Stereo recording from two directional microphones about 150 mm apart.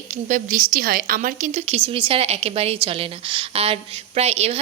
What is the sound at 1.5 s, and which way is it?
A woman's voice, 45° right (ahead or behind).